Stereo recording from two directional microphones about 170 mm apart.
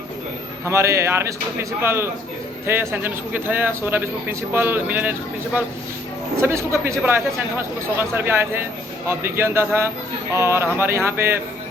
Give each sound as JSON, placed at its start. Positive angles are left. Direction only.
{"t": 0.6, "sound": "a man's voice", "side_deg": -15}
{"t": 6.4, "sound": "a man's voice", "side_deg": -15}
{"t": 7.9, "sound": "a man's voice", "side_deg": -15}